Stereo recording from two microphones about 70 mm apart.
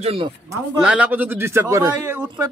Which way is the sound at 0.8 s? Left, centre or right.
Centre.